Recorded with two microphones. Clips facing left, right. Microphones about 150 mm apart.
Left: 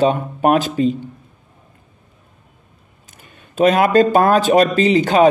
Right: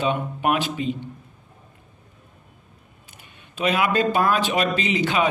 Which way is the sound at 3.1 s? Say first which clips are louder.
Left 13 dB; 45° left (ahead or behind).